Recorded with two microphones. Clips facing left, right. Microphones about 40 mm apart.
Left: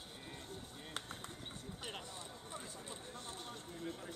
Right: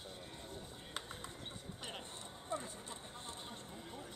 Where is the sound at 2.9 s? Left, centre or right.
Right.